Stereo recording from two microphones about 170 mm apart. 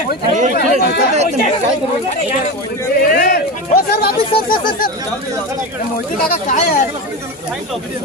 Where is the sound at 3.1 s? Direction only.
60° left (ahead or behind).